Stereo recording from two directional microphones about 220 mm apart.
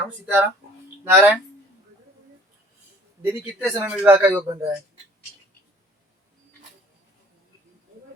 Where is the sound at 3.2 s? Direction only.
10° right (ahead or behind).